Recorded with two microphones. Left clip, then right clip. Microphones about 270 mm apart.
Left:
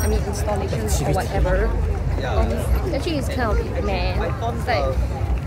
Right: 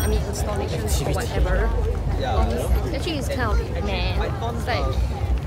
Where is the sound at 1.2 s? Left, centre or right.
Centre.